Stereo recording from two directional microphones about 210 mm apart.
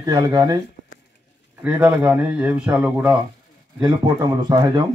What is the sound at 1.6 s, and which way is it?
Speech, 5° right (ahead or behind).